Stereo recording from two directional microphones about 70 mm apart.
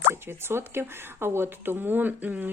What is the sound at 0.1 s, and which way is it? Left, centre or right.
A woman's voice, right.